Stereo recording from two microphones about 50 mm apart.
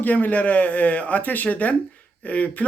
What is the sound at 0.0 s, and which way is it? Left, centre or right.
Speech, left.